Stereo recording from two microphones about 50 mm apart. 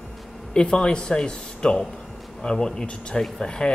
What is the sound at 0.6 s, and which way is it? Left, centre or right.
Speech, centre.